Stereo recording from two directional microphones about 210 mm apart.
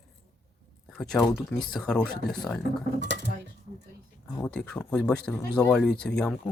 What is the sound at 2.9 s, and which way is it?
Dishes, 55° right (ahead or behind).